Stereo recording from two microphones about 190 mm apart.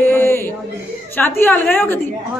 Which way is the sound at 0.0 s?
10° left (ahead or behind).